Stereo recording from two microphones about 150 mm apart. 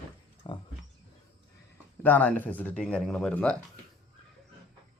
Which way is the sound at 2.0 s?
10° left (ahead or behind).